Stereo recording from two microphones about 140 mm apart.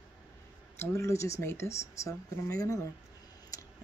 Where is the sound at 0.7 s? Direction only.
20° left (ahead or behind).